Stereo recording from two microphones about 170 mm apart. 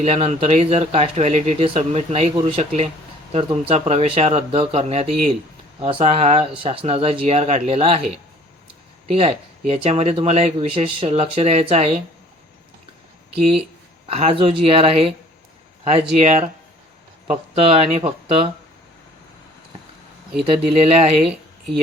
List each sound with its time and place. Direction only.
0.0 s speech: 40° right (ahead or behind)
9.1 s speech: 35° right (ahead or behind)
14.1 s speech: 35° right (ahead or behind)
20.4 s speech: 35° right (ahead or behind)
21.2 s a sound: centre (ahead or behind)